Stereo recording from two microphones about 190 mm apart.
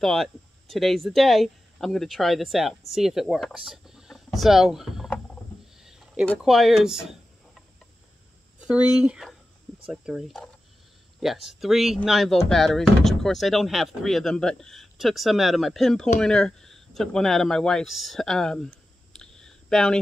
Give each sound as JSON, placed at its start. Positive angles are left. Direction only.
{"t": 0.0, "sound": "speech", "side_deg": 0}